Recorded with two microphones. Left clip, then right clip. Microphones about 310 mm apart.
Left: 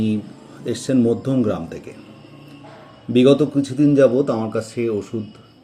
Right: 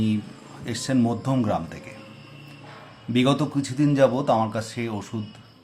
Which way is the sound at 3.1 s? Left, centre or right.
Centre.